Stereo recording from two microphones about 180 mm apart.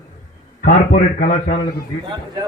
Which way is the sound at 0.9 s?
45° left (ahead or behind).